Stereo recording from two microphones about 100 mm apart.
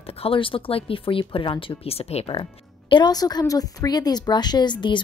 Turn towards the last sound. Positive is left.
turn(degrees=50)  # may be behind; listen again after turning